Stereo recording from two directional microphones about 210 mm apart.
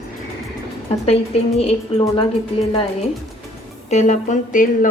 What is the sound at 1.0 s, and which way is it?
A woman's voice, 30° left (ahead or behind).